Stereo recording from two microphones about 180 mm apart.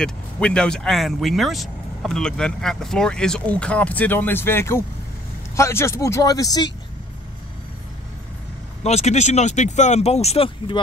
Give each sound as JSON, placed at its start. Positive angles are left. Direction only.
{"t": 0.0, "sound": "speech", "side_deg": 5}
{"t": 8.8, "sound": "speech", "side_deg": 35}